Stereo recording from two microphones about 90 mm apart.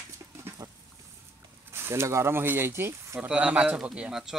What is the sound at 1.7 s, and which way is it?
Speech, 30° right (ahead or behind).